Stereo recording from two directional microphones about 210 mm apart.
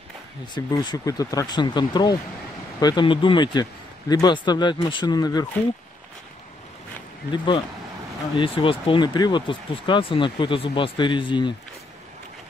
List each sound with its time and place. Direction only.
0.6 s speech: 15° left (ahead or behind)
7.2 s speech: 20° left (ahead or behind)